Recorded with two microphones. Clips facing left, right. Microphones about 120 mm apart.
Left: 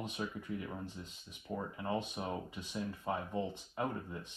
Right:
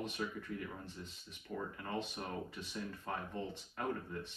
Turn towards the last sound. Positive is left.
turn(degrees=10)  # may be behind; listen again after turning